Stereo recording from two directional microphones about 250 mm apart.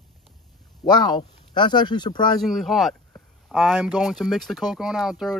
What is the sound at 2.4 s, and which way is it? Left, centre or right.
Speech, centre.